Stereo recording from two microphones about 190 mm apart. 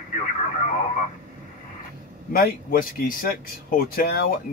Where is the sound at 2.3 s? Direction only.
50° left (ahead or behind).